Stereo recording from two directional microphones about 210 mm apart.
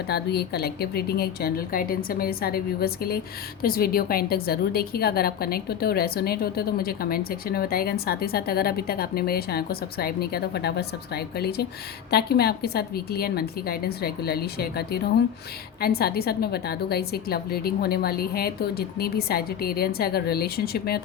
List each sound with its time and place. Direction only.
0.1 s a woman's voice: 50° left (ahead or behind)